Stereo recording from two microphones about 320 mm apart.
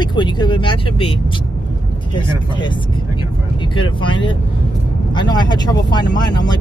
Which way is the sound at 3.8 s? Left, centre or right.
Centre.